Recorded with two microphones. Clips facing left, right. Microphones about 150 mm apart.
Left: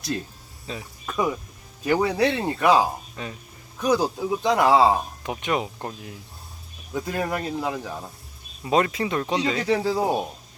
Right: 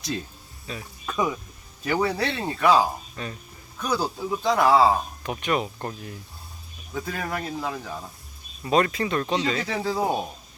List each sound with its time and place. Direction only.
1.0 s a man's voice: centre (ahead or behind)